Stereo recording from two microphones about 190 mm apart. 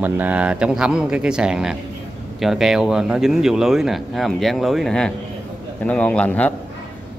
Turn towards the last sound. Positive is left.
turn(degrees=10)  # may be behind; listen again after turning